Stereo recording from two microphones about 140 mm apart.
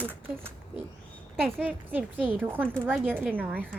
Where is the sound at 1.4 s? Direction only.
10° right (ahead or behind).